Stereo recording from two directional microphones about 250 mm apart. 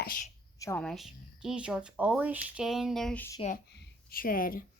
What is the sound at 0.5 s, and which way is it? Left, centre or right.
Speech, centre.